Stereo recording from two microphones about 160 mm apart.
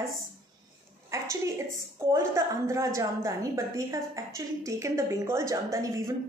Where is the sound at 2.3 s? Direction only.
20° right (ahead or behind).